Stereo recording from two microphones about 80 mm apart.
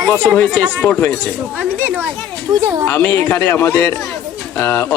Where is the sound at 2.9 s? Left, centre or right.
Left.